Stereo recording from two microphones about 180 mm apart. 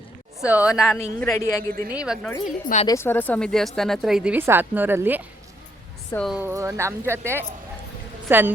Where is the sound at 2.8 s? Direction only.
15° left (ahead or behind); by 5.5 s 10° right (ahead or behind).